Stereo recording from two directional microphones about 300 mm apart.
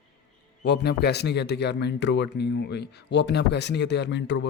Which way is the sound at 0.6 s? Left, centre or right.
Left.